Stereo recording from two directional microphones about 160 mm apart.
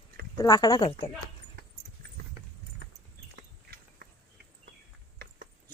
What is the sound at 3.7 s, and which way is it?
Walk, 90° right.